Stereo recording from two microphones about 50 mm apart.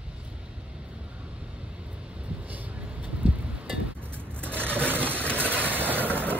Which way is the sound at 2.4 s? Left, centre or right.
Right.